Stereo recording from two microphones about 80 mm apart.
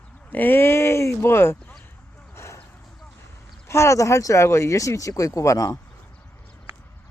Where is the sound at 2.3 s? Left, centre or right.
Left.